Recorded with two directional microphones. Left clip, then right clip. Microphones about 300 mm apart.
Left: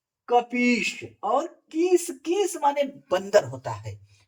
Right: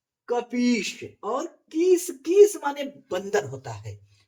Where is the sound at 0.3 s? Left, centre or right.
Centre.